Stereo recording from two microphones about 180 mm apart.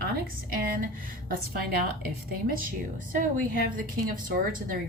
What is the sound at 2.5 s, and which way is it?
Speech, 50° right (ahead or behind).